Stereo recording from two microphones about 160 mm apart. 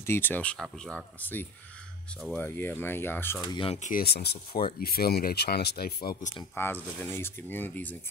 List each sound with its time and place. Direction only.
0.0 s speech: 15° left (ahead or behind)
3.3 s speech: 35° left (ahead or behind)
3.8 s speech: 70° left (ahead or behind); by 4.4 s 90° left
4.7 s speech: 70° left (ahead or behind)
6.5 s speech: 15° left (ahead or behind)